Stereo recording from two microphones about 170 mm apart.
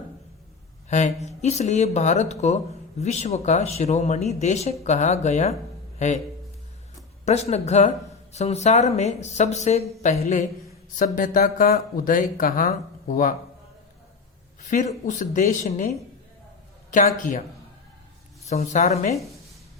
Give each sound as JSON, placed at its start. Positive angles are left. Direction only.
{"t": 0.9, "sound": "a woman's voice", "side_deg": 45}
{"t": 7.3, "sound": "speech", "side_deg": 40}
{"t": 10.9, "sound": "speech", "side_deg": 55}
{"t": 14.6, "sound": "a woman's voice", "side_deg": 45}
{"t": 16.9, "sound": "a woman's voice", "side_deg": 50}
{"t": 18.4, "sound": "a woman's voice", "side_deg": 40}